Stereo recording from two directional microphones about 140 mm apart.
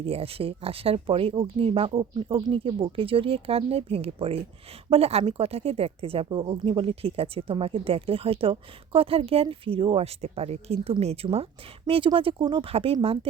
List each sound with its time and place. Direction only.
0.0 s speech: 45° right (ahead or behind)